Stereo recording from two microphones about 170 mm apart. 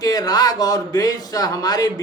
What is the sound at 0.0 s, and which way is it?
Speech, 20° left (ahead or behind).